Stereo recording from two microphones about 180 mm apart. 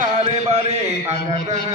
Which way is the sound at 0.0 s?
40° right (ahead or behind).